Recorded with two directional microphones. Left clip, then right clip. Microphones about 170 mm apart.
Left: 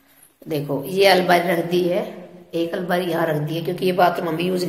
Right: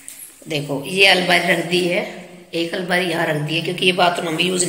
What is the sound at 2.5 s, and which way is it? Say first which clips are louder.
A man's voice: right 2 dB; 5° left (ahead or behind).